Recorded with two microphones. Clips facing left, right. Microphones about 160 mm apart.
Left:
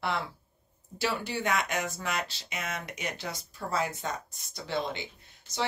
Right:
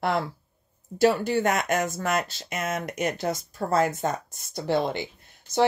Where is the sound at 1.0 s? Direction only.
45° right (ahead or behind).